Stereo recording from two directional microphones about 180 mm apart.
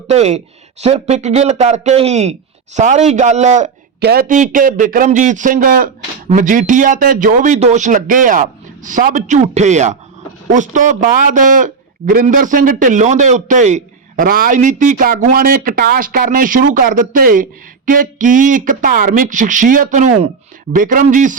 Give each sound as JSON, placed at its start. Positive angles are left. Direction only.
{"t": 0.1, "sound": "speech", "side_deg": -35}
{"t": 4.0, "sound": "a man's voice", "side_deg": -55}